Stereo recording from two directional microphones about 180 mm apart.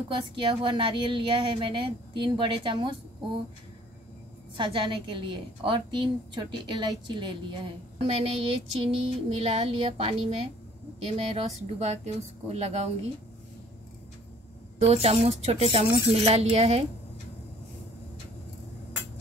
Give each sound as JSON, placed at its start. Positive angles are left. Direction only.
{"t": 0.1, "sound": "a woman's voice", "side_deg": -25}
{"t": 4.6, "sound": "a woman's voice", "side_deg": -25}
{"t": 14.8, "sound": "a woman's voice", "side_deg": -35}